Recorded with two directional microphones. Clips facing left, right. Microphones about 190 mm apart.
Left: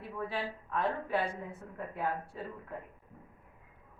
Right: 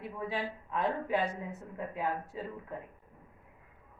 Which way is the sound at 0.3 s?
15° right (ahead or behind).